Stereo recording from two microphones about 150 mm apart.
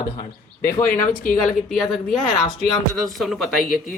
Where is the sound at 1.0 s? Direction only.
65° left (ahead or behind).